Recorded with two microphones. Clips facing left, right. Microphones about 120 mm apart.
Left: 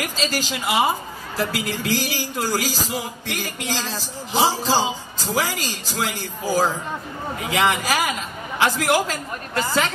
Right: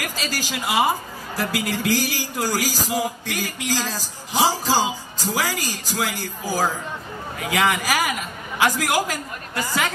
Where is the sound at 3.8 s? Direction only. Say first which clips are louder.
Even; 15° left (ahead or behind).